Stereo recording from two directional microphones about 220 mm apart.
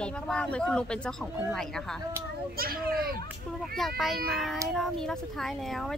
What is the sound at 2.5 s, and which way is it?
Speech, 45° right (ahead or behind).